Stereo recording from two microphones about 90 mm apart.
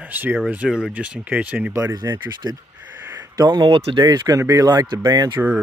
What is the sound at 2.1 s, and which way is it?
Speech, 35° right (ahead or behind).